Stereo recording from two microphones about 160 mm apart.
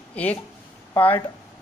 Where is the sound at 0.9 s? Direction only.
15° left (ahead or behind).